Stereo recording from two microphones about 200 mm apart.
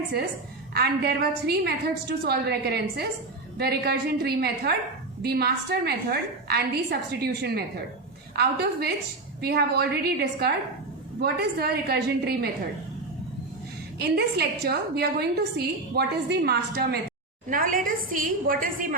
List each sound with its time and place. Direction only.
0.7 s a woman's voice: 50° right (ahead or behind)
14.0 s a woman's voice: 55° right (ahead or behind)